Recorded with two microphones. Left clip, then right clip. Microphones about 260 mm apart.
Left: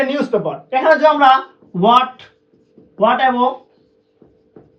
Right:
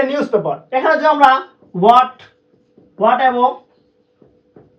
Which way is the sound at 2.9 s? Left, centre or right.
Centre.